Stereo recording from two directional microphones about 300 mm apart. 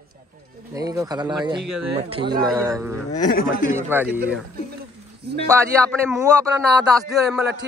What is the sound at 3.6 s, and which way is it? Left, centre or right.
Speech, centre.